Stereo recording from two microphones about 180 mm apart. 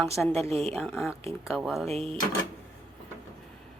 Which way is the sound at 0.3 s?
35° right (ahead or behind).